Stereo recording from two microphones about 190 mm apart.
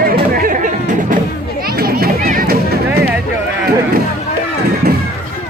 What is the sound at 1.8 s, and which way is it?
Music, 50° right (ahead or behind).